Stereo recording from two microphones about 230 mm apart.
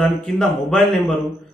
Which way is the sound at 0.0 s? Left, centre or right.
Centre.